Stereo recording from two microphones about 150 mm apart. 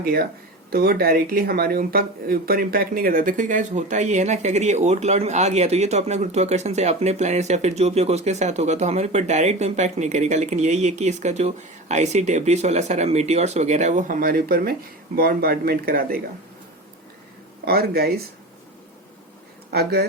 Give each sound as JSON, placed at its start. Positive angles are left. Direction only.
{"t": 0.0, "sound": "speech", "side_deg": -80}
{"t": 17.7, "sound": "speech", "side_deg": -90}
{"t": 19.7, "sound": "speech", "side_deg": -90}